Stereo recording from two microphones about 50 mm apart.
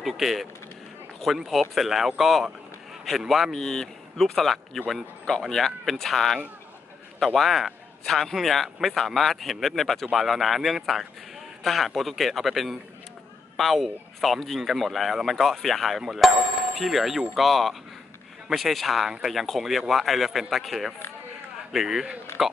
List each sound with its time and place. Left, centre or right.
0.0 s a man's voice: centre
3.5 s a man's voice: centre